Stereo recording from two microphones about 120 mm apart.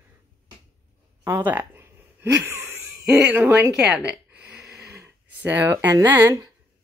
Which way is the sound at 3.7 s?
5° right (ahead or behind).